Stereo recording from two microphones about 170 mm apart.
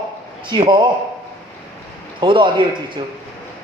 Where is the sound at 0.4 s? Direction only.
30° right (ahead or behind).